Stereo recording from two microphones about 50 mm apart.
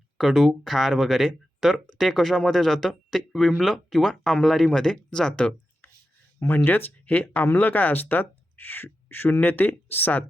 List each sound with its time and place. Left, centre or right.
0.2 s speech: centre
6.7 s speech: left